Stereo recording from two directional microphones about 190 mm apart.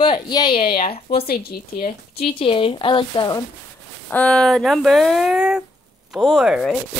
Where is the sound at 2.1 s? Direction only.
30° left (ahead or behind).